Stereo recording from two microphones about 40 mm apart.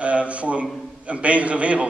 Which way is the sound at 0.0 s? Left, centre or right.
Right.